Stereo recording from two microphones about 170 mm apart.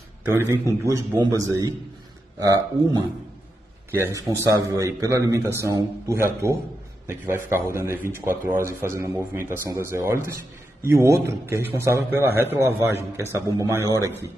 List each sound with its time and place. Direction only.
0.2 s a man's voice: 15° right (ahead or behind)